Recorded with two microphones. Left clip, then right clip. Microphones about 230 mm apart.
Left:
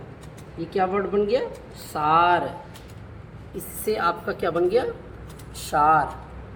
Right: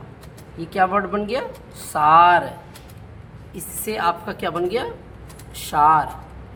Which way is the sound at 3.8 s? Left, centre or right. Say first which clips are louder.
Right 2 dB; centre.